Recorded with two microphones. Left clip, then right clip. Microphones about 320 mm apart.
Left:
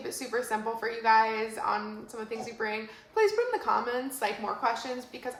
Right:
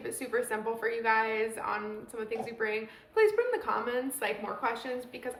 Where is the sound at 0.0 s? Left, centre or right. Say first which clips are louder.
Even; centre.